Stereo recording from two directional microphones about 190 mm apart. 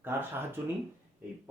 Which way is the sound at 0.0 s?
10° right (ahead or behind).